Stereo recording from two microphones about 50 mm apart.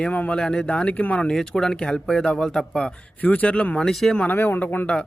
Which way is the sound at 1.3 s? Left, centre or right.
Centre.